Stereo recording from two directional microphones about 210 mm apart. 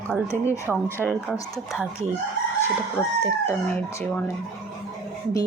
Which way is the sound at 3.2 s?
10° left (ahead or behind).